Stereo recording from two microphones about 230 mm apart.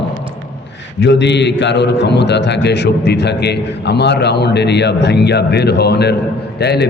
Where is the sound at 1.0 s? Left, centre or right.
Left.